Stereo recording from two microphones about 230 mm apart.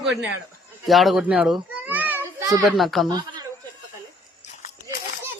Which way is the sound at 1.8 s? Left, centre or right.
Centre.